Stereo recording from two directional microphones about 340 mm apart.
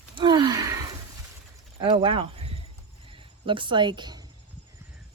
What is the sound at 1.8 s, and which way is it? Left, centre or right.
Speech, centre.